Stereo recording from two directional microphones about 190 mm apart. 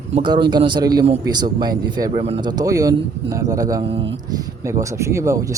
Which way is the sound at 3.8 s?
30° right (ahead or behind).